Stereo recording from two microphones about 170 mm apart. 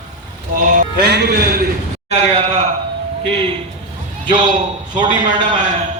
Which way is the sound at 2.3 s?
35° right (ahead or behind).